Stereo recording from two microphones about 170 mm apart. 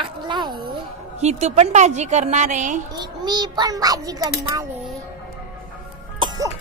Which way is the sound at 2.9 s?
25° right (ahead or behind).